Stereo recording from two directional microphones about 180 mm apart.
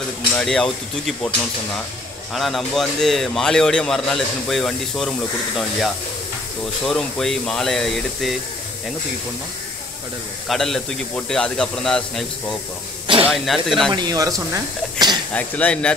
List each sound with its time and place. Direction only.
0.4 s a man's voice: 5° left (ahead or behind)
2.3 s a man's voice: centre (ahead or behind)
6.9 s a man's voice: 5° left (ahead or behind)
10.5 s a man's voice: centre (ahead or behind)
13.0 s snake: 30° right (ahead or behind)
13.3 s a man's voice: centre (ahead or behind)
13.9 s speech: 20° right (ahead or behind)
15.3 s speech: 10° left (ahead or behind)